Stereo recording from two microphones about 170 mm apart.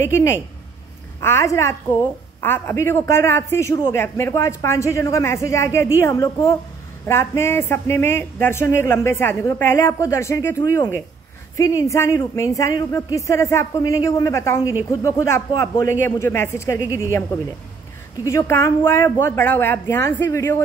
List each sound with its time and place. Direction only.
0.0 s a woman's voice: 15° left (ahead or behind)
18.2 s a woman's voice: 15° left (ahead or behind)